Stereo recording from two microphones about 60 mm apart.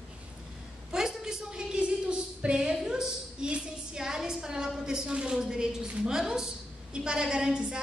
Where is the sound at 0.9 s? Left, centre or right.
Centre.